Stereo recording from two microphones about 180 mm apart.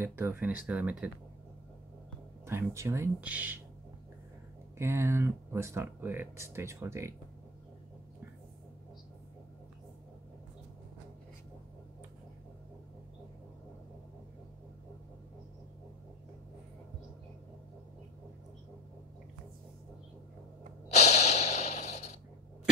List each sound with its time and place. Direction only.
0.0 s speech: 15° right (ahead or behind)
2.4 s speech: 15° right (ahead or behind)
4.7 s speech: 15° right (ahead or behind)
20.9 s snort: 40° left (ahead or behind)